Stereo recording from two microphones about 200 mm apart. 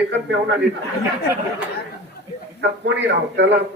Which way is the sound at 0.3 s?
65° right (ahead or behind).